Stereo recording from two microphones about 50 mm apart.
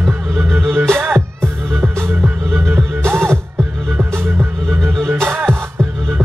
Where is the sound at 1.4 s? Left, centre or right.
Right.